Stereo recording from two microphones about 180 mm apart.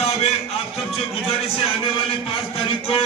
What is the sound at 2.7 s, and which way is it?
Speech, 30° left (ahead or behind).